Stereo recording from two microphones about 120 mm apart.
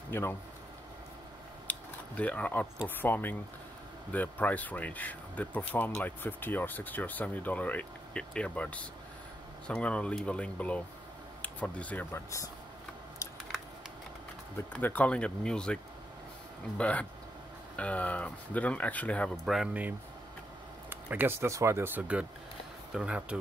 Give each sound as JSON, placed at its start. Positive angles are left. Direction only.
{"t": 0.1, "sound": "speech", "side_deg": 20}
{"t": 1.7, "sound": "speech", "side_deg": 10}
{"t": 14.7, "sound": "speech", "side_deg": 15}
{"t": 19.4, "sound": "speech", "side_deg": 0}
{"t": 19.7, "sound": "speech", "side_deg": -15}